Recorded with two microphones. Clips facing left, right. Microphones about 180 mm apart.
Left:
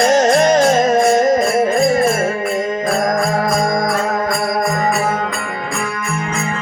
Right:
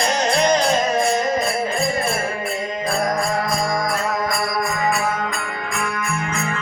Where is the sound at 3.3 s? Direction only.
50° left (ahead or behind).